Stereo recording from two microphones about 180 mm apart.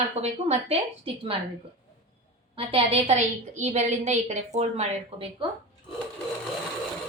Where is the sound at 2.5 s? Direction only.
35° right (ahead or behind).